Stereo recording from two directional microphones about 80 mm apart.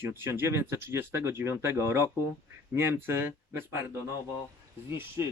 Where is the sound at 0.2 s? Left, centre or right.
Right.